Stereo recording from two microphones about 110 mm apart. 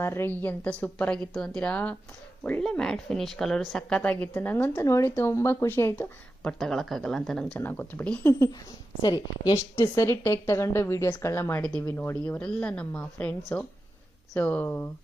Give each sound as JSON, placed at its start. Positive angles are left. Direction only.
{"t": 0.0, "sound": "a woman's voice", "side_deg": 20}
{"t": 6.4, "sound": "speech", "side_deg": 5}
{"t": 7.6, "sound": "speech", "side_deg": 20}
{"t": 8.2, "sound": "a woman's voice", "side_deg": 25}
{"t": 9.0, "sound": "a woman's voice", "side_deg": 40}
{"t": 9.9, "sound": "a woman's voice", "side_deg": 25}
{"t": 12.4, "sound": "speech", "side_deg": 10}
{"t": 14.3, "sound": "speech", "side_deg": 15}